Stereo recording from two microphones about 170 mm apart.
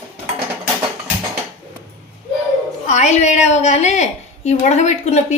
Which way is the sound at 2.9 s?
40° left (ahead or behind).